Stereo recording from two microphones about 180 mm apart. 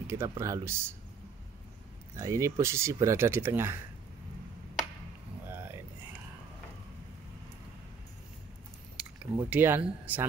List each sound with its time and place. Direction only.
0.0 s speech: 15° right (ahead or behind)
2.1 s speech: 20° right (ahead or behind)
5.5 s a sound: 10° right (ahead or behind)
9.4 s speech: 10° right (ahead or behind)